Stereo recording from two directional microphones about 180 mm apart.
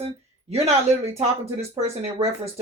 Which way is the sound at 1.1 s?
35° right (ahead or behind).